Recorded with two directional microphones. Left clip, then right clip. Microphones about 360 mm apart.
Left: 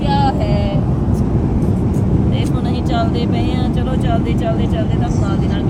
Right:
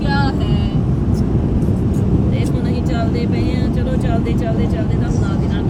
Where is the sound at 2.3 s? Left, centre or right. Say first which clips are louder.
Left 1 dB; centre.